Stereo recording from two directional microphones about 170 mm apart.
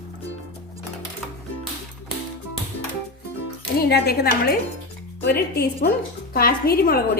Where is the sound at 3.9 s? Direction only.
65° left (ahead or behind).